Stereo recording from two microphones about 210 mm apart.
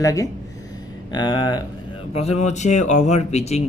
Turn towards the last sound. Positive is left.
turn(degrees=30)  # may be behind; listen again after turning